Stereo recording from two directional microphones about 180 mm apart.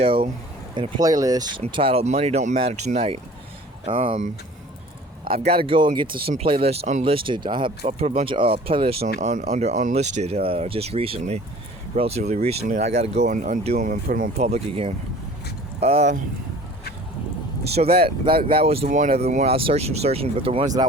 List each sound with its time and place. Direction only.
0.0 s speech: 30° right (ahead or behind)
5.5 s speech: 30° right (ahead or behind)
9.0 s speech: 45° right (ahead or behind)
17.9 s speech: 30° right (ahead or behind)
18.9 s speech: 45° right (ahead or behind); by 20.7 s 30° right (ahead or behind)